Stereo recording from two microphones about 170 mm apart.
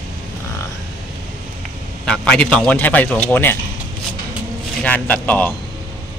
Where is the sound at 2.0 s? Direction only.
5° left (ahead or behind).